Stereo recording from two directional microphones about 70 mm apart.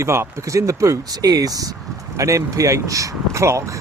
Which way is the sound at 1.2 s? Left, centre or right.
Right.